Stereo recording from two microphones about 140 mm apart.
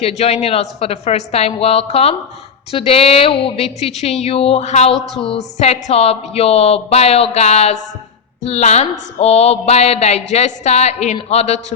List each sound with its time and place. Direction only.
0.0 s a woman's voice: 50° left (ahead or behind)
4.9 s a woman's voice: centre (ahead or behind)
5.2 s a woman's voice: 45° left (ahead or behind)